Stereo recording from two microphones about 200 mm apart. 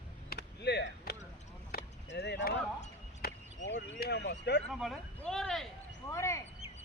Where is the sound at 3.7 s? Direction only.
55° left (ahead or behind).